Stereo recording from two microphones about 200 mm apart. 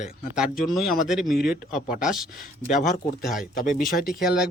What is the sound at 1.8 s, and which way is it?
Speech, 45° left (ahead or behind).